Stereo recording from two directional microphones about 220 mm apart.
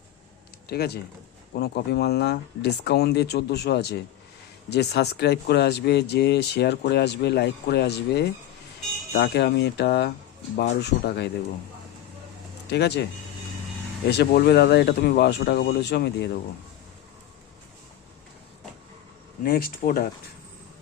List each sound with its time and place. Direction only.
0.7 s speech: 45° left (ahead or behind)
12.7 s speech: 50° left (ahead or behind)
14.1 s speech: 45° left (ahead or behind)
19.4 s speech: 40° left (ahead or behind)